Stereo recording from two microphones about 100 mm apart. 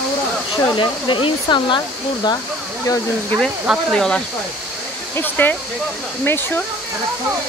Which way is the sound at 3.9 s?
5° left (ahead or behind).